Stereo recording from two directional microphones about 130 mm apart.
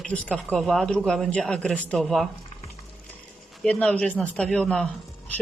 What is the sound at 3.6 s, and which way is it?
Speech, 10° left (ahead or behind).